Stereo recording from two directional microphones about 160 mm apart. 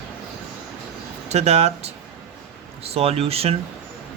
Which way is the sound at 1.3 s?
40° right (ahead or behind).